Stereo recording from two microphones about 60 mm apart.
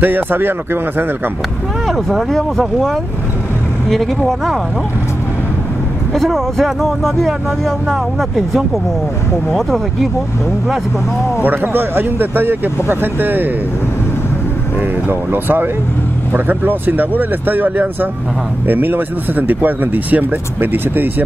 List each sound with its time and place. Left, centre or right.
0.0 s speech: right
1.9 s speech: centre
6.1 s speech: centre
11.4 s speech: right
14.8 s speech: right